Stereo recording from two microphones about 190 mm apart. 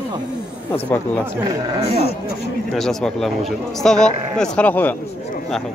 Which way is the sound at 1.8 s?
55° left (ahead or behind).